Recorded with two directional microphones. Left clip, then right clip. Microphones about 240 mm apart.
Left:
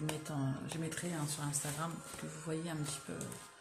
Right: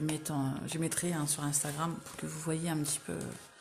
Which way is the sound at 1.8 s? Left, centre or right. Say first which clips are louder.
Right 5 dB; right.